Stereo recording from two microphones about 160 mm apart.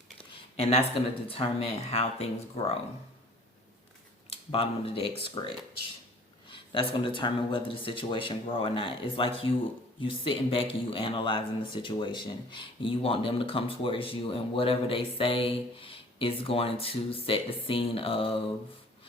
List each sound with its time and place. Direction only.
0.5 s speech: 40° left (ahead or behind)
4.3 s speech: 35° left (ahead or behind)